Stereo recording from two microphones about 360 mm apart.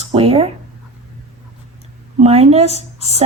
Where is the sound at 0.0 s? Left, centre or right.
Centre.